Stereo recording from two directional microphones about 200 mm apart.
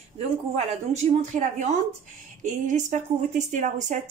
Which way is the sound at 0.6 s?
35° right (ahead or behind).